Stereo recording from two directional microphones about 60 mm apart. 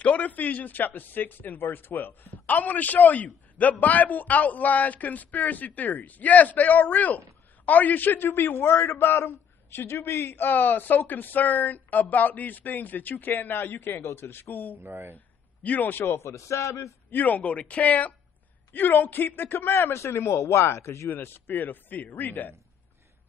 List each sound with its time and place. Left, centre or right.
0.0 s a man's voice: left
14.8 s speech: right
15.1 s a man's voice: left
16.3 s a man's voice: left
17.1 s a man's voice: left